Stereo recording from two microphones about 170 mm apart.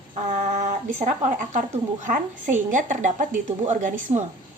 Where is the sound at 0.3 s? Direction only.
45° right (ahead or behind).